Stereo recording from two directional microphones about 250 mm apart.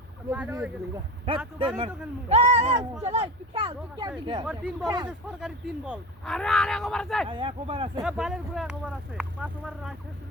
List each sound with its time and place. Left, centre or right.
0.3 s speech: centre
1.5 s speech: right
4.4 s speech: centre
7.3 s speech: right
8.0 s speech: centre